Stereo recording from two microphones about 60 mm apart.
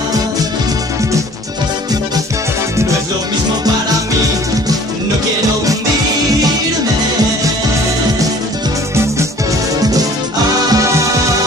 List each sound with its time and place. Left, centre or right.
10.7 s music: right